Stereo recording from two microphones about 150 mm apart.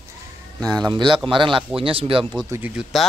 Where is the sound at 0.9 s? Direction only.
30° right (ahead or behind).